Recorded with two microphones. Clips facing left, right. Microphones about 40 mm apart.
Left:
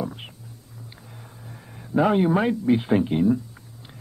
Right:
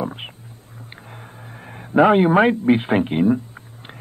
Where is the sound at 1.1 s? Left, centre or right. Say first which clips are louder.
Right 5 dB; right.